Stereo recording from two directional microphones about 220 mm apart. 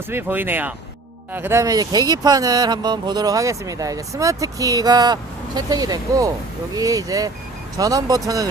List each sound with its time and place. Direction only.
0.1 s speech: 10° right (ahead or behind)